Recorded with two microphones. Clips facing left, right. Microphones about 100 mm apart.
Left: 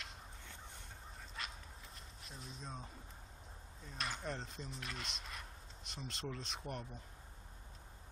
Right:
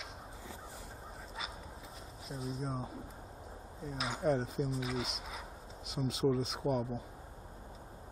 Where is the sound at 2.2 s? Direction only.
Centre (ahead or behind).